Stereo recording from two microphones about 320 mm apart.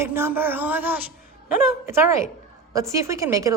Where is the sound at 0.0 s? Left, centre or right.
Centre.